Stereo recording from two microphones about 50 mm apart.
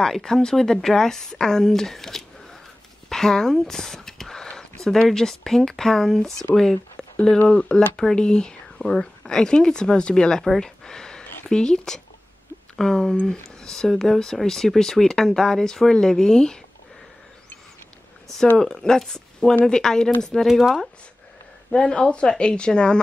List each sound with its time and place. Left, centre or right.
0.0 s speech: centre
10.6 s a sound: centre
11.4 s speech: centre
18.6 s speech: centre
20.4 s speech: centre
21.7 s speech: centre